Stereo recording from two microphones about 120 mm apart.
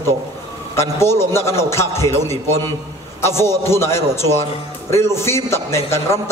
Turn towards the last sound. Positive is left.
turn(degrees=20)  # may be behind; listen again after turning